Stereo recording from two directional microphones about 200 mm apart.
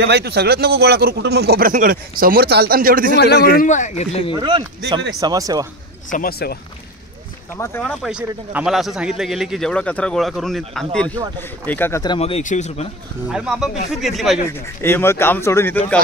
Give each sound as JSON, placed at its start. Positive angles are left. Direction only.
{"t": 0.0, "sound": "speech", "side_deg": -55}
{"t": 3.6, "sound": "speech", "side_deg": 40}
{"t": 4.4, "sound": "speech", "side_deg": -20}
{"t": 6.0, "sound": "speech", "side_deg": 45}
{"t": 7.5, "sound": "speech", "side_deg": 10}
{"t": 8.0, "sound": "speech", "side_deg": -5}
{"t": 13.3, "sound": "speech", "side_deg": 0}
{"t": 14.5, "sound": "speech", "side_deg": 10}